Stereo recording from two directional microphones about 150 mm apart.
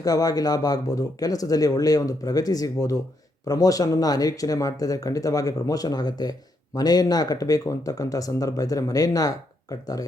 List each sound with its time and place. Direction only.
0.0 s speech: 25° left (ahead or behind)